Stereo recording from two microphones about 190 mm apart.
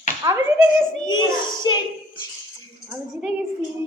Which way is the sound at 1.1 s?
20° left (ahead or behind).